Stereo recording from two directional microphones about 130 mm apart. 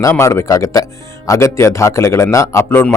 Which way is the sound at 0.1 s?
20° left (ahead or behind).